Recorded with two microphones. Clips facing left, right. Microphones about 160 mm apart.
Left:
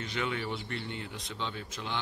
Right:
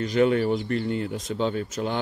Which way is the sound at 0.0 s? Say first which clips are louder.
Right 13 dB; 40° right (ahead or behind).